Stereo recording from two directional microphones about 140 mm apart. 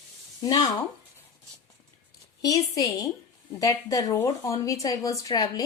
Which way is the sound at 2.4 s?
25° left (ahead or behind).